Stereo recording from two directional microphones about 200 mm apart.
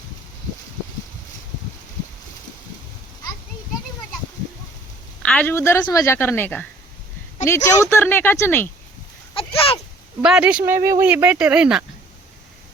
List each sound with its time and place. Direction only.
5.2 s a woman's voice: 5° left (ahead or behind)
9.3 s a sound: 25° left (ahead or behind)
10.2 s speech: 5° right (ahead or behind)